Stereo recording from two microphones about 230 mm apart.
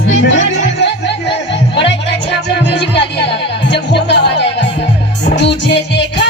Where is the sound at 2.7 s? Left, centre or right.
Left.